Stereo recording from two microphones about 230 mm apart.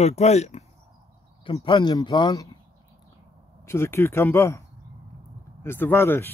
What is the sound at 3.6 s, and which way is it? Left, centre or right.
Speech, centre.